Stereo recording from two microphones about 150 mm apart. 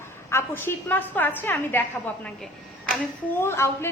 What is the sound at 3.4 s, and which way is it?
Speech, 15° left (ahead or behind).